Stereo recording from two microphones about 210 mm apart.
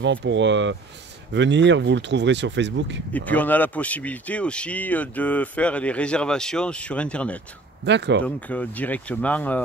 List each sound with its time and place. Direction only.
0.0 s speech: 60° right (ahead or behind)
3.1 s speech: 5° left (ahead or behind)
7.8 s speech: 55° right (ahead or behind)
8.5 s speech: 5° left (ahead or behind)